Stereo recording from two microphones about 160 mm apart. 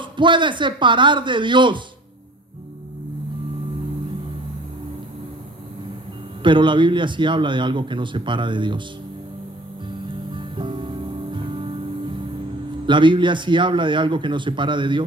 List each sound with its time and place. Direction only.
0.0 s speech: 30° right (ahead or behind)
6.4 s speech: 30° right (ahead or behind)
10.3 s music: 30° right (ahead or behind)
12.8 s a man's voice: 30° right (ahead or behind)